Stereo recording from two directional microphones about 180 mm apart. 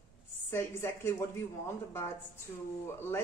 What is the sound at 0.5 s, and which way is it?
Speech, 15° left (ahead or behind).